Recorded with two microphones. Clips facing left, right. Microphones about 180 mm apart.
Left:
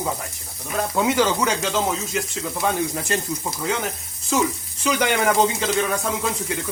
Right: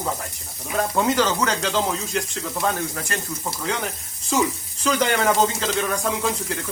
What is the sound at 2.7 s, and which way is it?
Speech, 20° left (ahead or behind).